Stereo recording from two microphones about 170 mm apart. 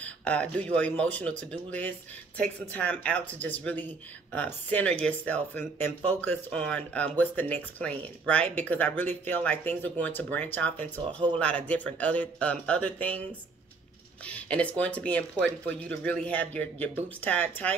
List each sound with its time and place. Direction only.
0.0 s speech: 5° left (ahead or behind)